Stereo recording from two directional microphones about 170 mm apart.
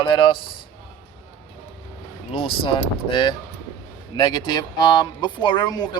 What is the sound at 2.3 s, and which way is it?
Speech, 30° left (ahead or behind).